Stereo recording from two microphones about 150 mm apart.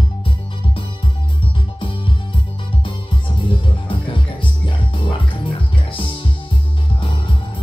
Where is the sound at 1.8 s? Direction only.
35° left (ahead or behind).